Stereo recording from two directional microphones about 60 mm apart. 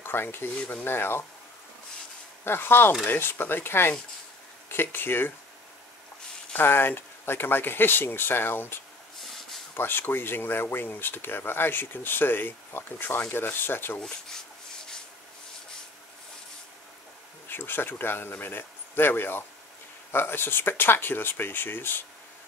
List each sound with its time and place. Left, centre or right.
0.0 s speech: left
2.4 s speech: left
6.5 s speech: left
9.2 s a sound: centre
9.8 s speech: left
17.5 s speech: left